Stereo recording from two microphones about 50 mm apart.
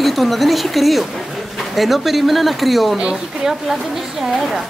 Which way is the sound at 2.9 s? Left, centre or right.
Centre.